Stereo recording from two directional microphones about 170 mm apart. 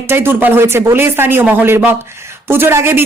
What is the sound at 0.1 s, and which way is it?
Speech, 15° right (ahead or behind).